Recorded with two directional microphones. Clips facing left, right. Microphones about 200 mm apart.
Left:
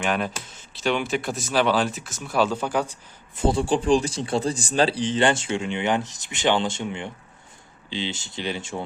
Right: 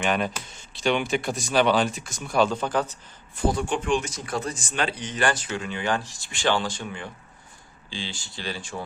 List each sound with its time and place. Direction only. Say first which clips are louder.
0.0 s speech: even; centre (ahead or behind)
3.4 s speech: left 4 dB; 30° left (ahead or behind)